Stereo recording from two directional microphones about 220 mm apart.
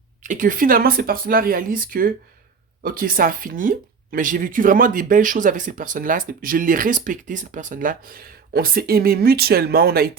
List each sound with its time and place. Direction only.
0.2 s speech: 35° right (ahead or behind)